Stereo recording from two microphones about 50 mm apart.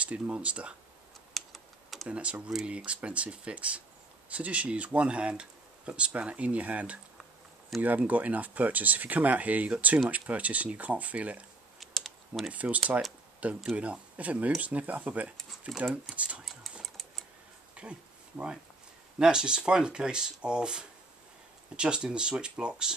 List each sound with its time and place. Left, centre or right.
0.0 s speech: right
1.3 s typing: centre
2.0 s speech: right
7.7 s speech: centre
8.1 s speech: right
11.8 s typing: centre
12.5 s speech: right
15.7 s speech: centre
16.2 s speech: right
16.8 s typing: centre
17.8 s a sound: right
19.1 s speech: centre